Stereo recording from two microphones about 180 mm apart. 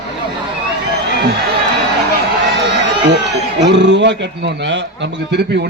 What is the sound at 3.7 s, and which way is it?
A man's voice, 80° right.